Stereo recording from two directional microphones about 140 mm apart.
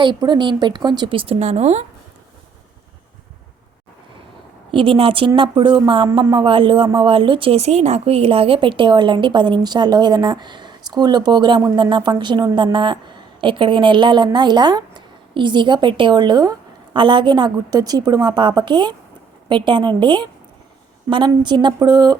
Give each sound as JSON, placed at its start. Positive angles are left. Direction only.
{"t": 0.0, "sound": "speech", "side_deg": -30}
{"t": 4.7, "sound": "speech", "side_deg": -40}